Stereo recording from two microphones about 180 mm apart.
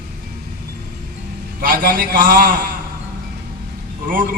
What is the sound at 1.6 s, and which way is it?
A man's voice, 50° right (ahead or behind).